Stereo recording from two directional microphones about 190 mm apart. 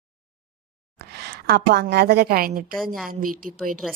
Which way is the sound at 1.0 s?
60° right (ahead or behind).